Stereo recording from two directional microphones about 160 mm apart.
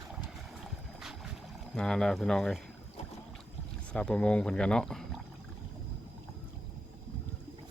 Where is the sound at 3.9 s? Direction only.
5° left (ahead or behind).